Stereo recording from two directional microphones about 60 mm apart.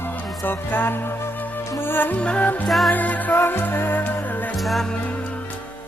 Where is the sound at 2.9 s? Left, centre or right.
Left.